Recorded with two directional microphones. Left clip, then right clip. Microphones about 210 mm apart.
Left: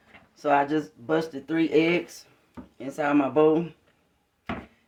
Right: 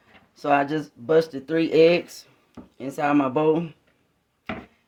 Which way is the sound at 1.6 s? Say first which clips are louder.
Right 5 dB; 70° right (ahead or behind).